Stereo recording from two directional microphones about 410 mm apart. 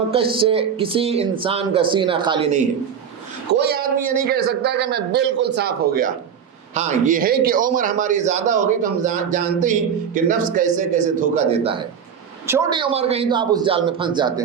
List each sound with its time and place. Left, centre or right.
0.1 s a man's voice: centre